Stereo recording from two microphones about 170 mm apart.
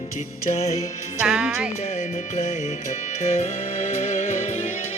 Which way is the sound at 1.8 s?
45° left (ahead or behind).